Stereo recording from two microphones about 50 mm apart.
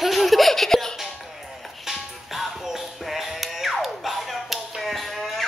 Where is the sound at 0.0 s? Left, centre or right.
Centre.